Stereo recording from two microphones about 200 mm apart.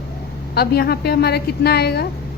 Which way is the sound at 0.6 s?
50° left (ahead or behind).